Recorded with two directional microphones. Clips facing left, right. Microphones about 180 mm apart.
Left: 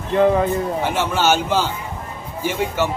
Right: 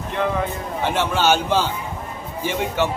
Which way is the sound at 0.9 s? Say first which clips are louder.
Right 2 dB; 10° left (ahead or behind).